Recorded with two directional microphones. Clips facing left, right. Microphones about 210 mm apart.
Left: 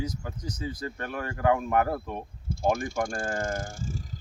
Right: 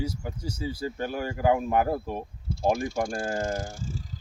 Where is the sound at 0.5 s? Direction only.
30° right (ahead or behind).